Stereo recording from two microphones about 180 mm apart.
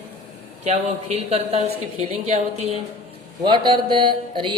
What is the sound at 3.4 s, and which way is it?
Mantra, 25° right (ahead or behind).